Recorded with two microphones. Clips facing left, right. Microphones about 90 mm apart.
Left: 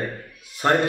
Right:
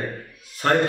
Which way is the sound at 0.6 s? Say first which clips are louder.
Even; 15° left (ahead or behind).